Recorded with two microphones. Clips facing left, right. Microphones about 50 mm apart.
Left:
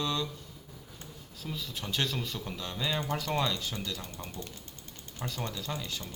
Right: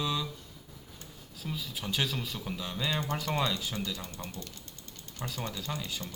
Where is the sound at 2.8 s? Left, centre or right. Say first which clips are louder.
Even; centre.